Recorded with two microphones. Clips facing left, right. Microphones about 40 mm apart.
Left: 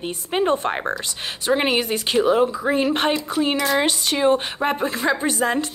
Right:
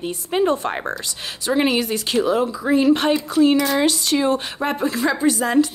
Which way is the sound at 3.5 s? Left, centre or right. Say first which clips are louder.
Right 1 dB; centre.